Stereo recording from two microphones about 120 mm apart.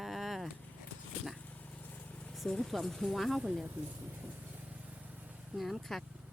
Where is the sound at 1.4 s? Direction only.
10° left (ahead or behind).